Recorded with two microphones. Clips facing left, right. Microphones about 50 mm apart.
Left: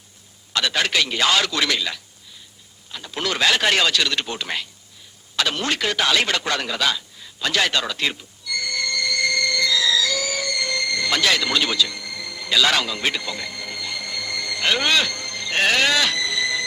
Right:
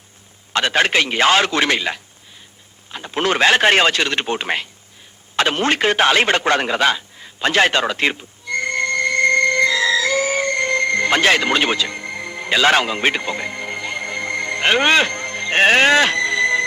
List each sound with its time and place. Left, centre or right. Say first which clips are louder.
0.5 s speech: right 5 dB; right
5.4 s radio: right 6 dB; right